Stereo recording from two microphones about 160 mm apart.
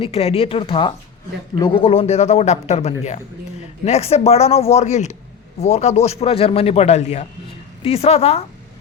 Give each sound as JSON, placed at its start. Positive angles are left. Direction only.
{"t": 0.0, "sound": "a man's voice", "side_deg": 40}